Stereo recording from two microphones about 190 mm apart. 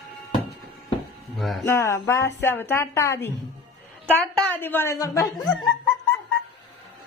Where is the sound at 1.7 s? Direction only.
15° left (ahead or behind).